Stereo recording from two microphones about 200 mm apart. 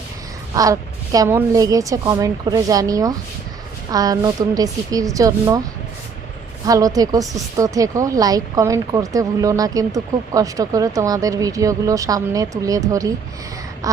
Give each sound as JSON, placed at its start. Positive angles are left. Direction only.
{"t": 0.5, "sound": "a woman's voice", "side_deg": -15}
{"t": 6.7, "sound": "a woman's voice", "side_deg": -15}